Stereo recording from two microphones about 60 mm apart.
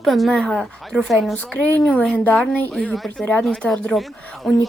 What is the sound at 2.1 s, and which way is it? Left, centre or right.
Speech, left.